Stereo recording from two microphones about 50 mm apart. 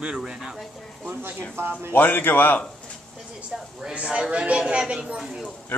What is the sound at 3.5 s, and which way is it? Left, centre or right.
Speech, centre.